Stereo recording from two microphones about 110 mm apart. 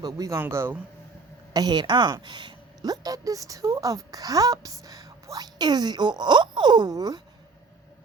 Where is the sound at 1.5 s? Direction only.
40° right (ahead or behind).